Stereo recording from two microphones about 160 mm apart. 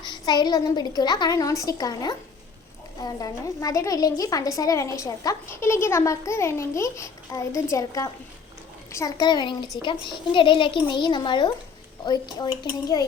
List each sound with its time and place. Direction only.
0.0 s a woman's voice: 25° left (ahead or behind)